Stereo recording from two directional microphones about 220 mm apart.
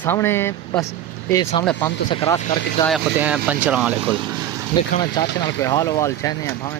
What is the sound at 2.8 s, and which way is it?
Speech, 5° right (ahead or behind).